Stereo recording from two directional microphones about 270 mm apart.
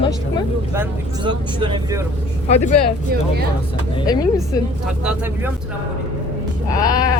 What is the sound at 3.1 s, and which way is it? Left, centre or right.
Speech, right.